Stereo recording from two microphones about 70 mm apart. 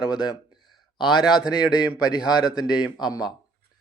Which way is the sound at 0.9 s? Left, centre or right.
Centre.